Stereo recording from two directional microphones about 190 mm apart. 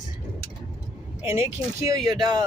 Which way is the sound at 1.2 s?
15° right (ahead or behind).